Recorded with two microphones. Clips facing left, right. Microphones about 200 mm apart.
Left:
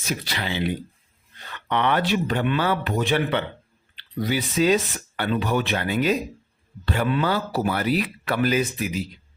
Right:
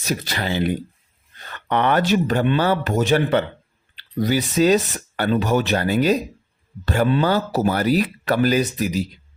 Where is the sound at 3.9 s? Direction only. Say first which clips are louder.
Right 5 dB; 40° right (ahead or behind).